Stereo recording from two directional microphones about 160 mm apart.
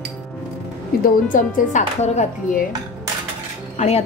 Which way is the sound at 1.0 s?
55° left (ahead or behind).